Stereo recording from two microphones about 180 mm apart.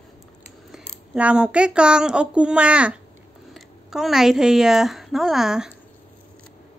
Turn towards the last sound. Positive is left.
turn(degrees=-5)  # may be behind; listen again after turning